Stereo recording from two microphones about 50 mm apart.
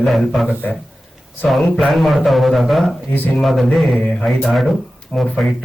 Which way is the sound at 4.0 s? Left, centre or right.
Left.